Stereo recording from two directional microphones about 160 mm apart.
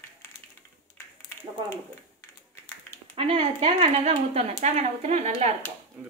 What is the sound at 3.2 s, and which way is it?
Speech, 35° right (ahead or behind).